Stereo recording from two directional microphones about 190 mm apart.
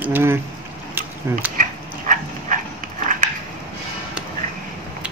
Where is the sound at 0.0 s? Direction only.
10° right (ahead or behind).